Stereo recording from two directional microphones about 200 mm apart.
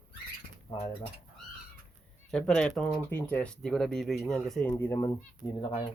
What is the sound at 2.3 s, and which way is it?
Speech, 5° left (ahead or behind).